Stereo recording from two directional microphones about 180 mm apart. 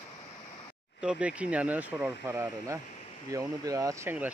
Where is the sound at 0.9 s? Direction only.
5° right (ahead or behind).